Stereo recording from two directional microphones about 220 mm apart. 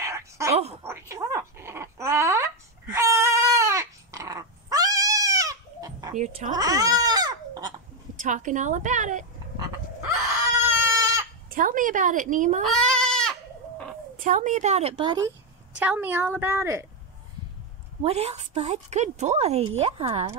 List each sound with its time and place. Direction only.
0.0 s a sound: 15° right (ahead or behind)
0.8 s dog: 10° right (ahead or behind)
6.1 s speech: 30° right (ahead or behind)
6.5 s baby cry: 15° right (ahead or behind)
8.2 s a woman's voice: 35° right (ahead or behind)
10.6 s baby cry: 10° right (ahead or behind)
11.5 s a woman's voice: 40° right (ahead or behind)
12.6 s goat: 5° left (ahead or behind)
14.2 s a woman's voice: 35° right (ahead or behind); by 15.3 s 20° right (ahead or behind)
15.8 s a woman's voice: 5° right (ahead or behind)
18.0 s a woman's voice: 30° right (ahead or behind)